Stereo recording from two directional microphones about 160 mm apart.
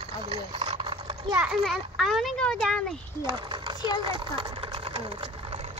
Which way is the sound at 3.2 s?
25° right (ahead or behind).